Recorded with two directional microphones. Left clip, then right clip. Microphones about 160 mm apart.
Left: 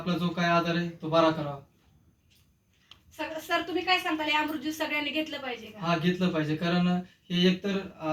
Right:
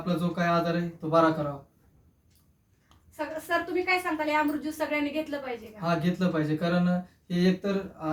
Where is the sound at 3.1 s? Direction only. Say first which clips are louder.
Right 1 dB; 20° right (ahead or behind).